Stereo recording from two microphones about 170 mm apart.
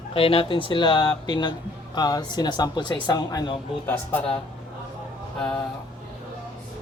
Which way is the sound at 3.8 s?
10° left (ahead or behind).